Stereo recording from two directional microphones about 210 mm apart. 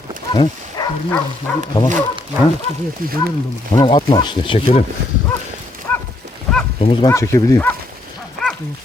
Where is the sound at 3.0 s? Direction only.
45° right (ahead or behind).